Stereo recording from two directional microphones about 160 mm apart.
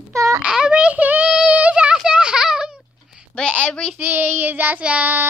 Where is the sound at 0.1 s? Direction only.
20° right (ahead or behind).